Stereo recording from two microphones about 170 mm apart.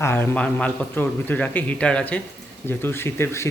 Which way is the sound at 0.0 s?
10° left (ahead or behind).